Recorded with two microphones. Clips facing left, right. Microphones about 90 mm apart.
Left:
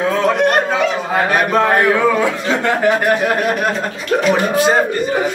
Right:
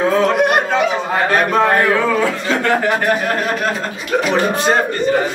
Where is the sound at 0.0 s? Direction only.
Centre (ahead or behind).